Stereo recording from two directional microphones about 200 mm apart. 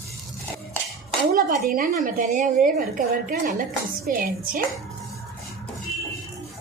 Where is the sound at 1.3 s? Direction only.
45° right (ahead or behind).